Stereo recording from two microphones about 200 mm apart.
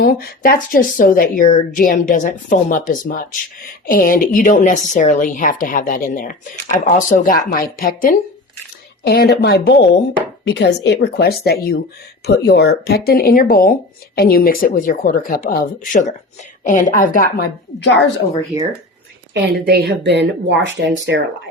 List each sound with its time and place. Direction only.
0.0 s a woman's voice: 50° left (ahead or behind)
19.3 s speech: 55° right (ahead or behind)